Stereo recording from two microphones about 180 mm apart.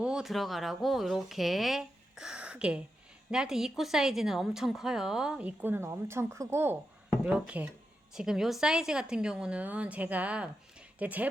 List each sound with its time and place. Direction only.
0.0 s speech: 5° right (ahead or behind)